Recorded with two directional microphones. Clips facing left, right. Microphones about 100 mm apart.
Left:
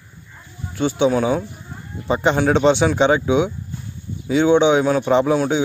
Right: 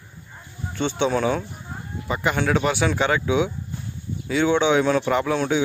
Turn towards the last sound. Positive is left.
turn(degrees=15)  # may be behind; listen again after turning